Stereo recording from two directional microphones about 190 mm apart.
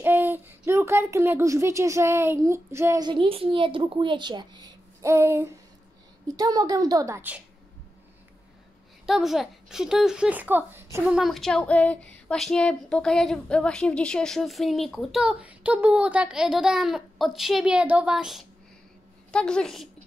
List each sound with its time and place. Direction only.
0.0 s a woman's voice: 10° right (ahead or behind)
9.0 s speech: centre (ahead or behind)